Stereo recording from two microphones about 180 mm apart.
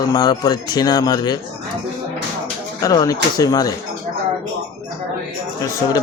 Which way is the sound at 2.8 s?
20° left (ahead or behind).